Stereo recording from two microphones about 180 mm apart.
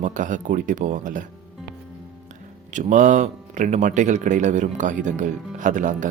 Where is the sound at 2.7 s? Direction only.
45° right (ahead or behind).